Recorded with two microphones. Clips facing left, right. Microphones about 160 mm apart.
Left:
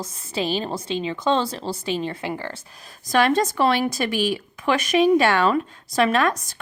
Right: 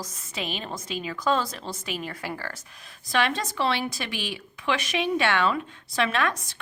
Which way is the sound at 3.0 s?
45° left (ahead or behind).